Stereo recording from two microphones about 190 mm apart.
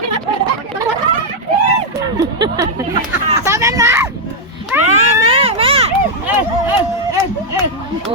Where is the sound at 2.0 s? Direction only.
15° right (ahead or behind).